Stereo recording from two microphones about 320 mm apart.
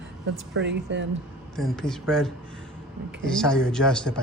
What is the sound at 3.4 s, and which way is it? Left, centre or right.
Speech, centre.